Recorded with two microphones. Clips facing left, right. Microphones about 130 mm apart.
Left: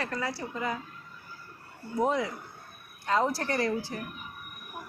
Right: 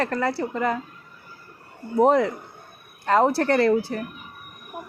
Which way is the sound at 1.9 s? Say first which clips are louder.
Right 9 dB; 60° right (ahead or behind).